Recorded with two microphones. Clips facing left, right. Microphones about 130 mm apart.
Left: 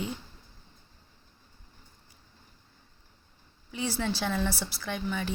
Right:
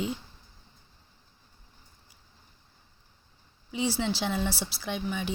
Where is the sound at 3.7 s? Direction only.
15° right (ahead or behind).